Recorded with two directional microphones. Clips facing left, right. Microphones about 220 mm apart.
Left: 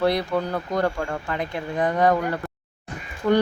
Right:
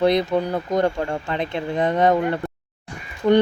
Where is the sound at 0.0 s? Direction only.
20° right (ahead or behind).